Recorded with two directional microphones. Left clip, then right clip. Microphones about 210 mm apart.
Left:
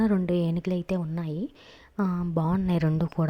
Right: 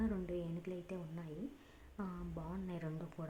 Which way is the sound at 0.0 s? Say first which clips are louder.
Left 16 dB; 45° left (ahead or behind).